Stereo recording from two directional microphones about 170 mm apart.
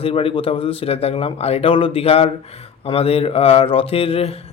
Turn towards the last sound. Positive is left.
turn(degrees=35)  # may be behind; listen again after turning